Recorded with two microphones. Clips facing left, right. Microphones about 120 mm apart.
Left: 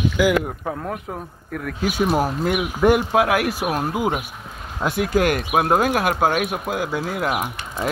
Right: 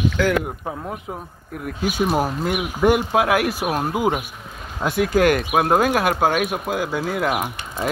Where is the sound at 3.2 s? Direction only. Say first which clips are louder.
Even; 25° right (ahead or behind).